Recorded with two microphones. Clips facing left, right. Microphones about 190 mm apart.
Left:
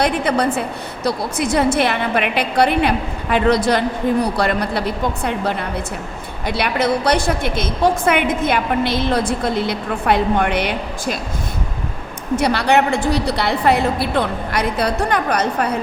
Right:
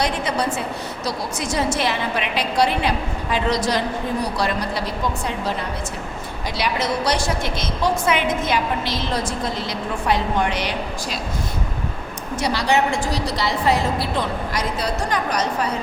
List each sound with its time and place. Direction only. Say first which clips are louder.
0.0 s a woman's voice: left 5 dB; 55° left (ahead or behind)
12.4 s a woman's voice: left 3 dB; 60° left (ahead or behind)